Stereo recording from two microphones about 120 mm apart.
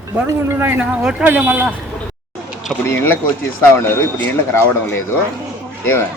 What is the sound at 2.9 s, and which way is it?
Speech, 20° left (ahead or behind).